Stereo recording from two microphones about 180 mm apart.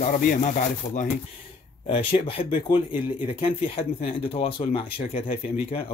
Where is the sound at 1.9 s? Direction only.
30° left (ahead or behind).